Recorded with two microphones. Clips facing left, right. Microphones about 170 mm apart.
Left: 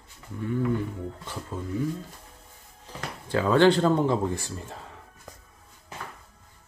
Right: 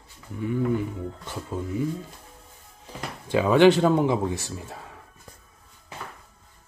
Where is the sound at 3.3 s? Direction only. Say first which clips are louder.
Right 3 dB; 15° right (ahead or behind).